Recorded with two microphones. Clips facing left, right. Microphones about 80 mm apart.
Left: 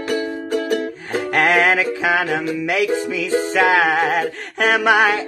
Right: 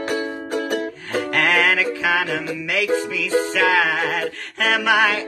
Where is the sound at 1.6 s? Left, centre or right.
Left.